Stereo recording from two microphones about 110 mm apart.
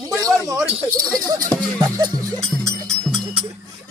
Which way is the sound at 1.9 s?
30° right (ahead or behind).